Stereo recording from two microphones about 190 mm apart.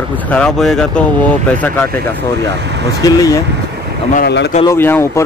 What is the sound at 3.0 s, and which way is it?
Speech, 20° left (ahead or behind).